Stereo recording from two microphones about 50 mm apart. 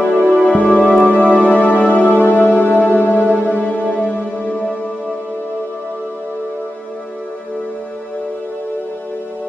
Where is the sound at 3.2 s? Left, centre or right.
Right.